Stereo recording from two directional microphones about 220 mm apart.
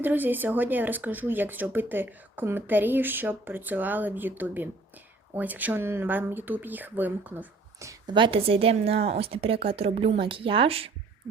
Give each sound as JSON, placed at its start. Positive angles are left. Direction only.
{"t": 0.0, "sound": "speech", "side_deg": -10}